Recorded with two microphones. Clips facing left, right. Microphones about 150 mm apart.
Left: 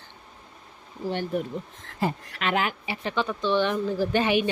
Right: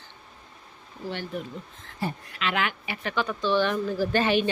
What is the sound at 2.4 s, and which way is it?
Speech, 40° left (ahead or behind).